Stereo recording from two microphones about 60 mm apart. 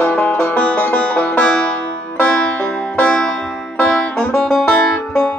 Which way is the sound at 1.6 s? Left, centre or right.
Centre.